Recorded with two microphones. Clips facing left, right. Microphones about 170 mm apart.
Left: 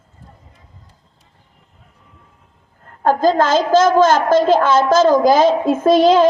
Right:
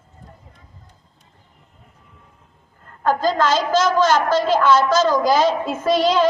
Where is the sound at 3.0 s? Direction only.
50° left (ahead or behind).